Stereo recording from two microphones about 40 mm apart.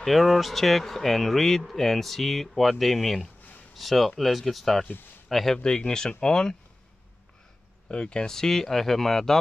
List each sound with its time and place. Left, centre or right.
0.0 s speech: centre
5.6 s speech: centre
7.9 s speech: left
8.4 s speech: centre